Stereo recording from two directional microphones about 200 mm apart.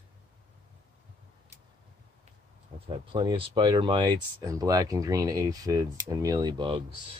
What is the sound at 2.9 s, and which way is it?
Speech, 25° right (ahead or behind).